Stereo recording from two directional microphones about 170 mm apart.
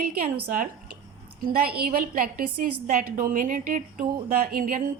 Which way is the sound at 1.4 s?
65° right (ahead or behind).